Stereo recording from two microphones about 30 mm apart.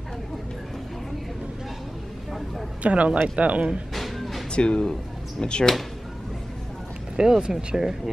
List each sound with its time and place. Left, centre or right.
2.8 s speech: right
3.9 s music: centre
4.5 s speech: left
7.2 s speech: right